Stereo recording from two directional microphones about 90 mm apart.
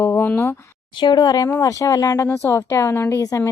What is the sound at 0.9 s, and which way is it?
Speech, 60° left (ahead or behind).